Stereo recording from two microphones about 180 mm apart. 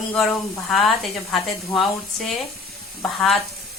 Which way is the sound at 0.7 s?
Centre (ahead or behind).